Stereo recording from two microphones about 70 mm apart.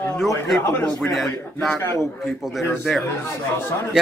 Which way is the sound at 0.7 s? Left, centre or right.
Left.